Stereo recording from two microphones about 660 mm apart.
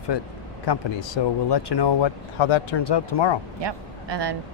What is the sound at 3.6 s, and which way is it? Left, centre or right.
Speech, right.